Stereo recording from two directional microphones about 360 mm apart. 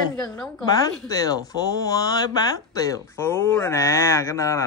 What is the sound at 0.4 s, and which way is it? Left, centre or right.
Speech, centre.